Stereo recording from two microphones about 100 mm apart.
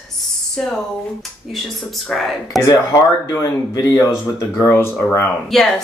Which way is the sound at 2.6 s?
35° left (ahead or behind).